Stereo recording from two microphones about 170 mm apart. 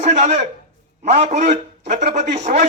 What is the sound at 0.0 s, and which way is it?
A man's voice, 45° right (ahead or behind).